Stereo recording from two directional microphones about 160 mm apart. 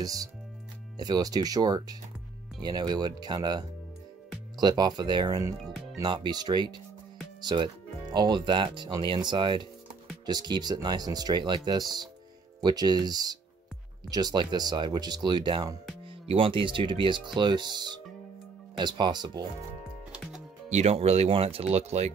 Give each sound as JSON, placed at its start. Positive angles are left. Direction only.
{"t": 0.0, "sound": "speech", "side_deg": -20}
{"t": 5.6, "sound": "music", "side_deg": 0}
{"t": 5.9, "sound": "speech", "side_deg": -25}
{"t": 20.1, "sound": "music", "side_deg": -5}
{"t": 20.7, "sound": "speech", "side_deg": -40}